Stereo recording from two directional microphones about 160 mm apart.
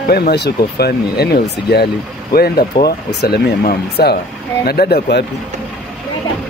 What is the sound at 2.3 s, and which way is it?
Speech, 70° left (ahead or behind).